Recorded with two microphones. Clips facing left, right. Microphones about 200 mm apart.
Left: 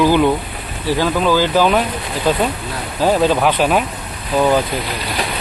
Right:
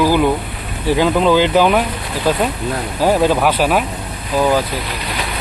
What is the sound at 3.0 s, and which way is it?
Speech, 10° right (ahead or behind).